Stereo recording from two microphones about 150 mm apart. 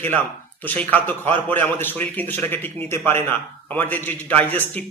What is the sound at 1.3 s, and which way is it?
Speech, 35° right (ahead or behind).